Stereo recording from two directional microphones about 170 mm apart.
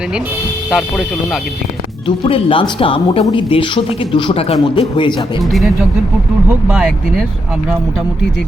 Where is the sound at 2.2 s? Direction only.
30° left (ahead or behind).